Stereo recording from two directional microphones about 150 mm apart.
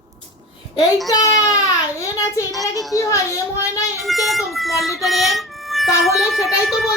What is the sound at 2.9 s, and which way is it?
Speech, 20° left (ahead or behind).